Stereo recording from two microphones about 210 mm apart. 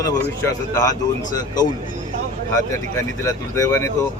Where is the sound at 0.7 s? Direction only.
15° left (ahead or behind).